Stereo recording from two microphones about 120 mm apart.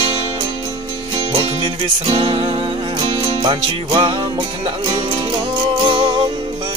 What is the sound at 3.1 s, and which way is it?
Music, 40° right (ahead or behind).